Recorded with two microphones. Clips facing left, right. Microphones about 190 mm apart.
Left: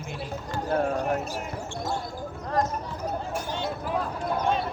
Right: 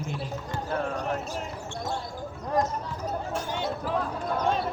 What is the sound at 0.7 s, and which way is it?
Speech, 45° left (ahead or behind).